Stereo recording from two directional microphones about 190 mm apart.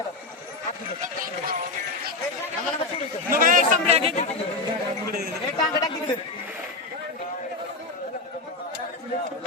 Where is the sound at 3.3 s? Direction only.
45° right (ahead or behind).